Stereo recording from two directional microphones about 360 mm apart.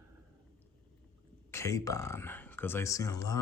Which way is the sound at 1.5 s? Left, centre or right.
Centre.